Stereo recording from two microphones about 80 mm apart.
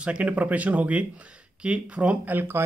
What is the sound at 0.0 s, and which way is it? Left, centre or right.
Speech, centre.